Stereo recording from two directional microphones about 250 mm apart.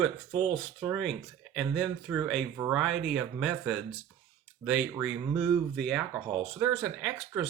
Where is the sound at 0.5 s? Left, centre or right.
Centre.